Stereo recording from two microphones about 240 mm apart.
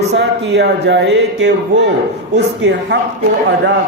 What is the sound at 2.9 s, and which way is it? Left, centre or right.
Speech, right.